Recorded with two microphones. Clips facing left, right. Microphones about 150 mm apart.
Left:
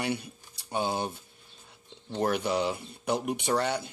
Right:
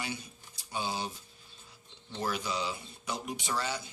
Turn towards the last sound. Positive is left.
turn(degrees=60)  # may be behind; listen again after turning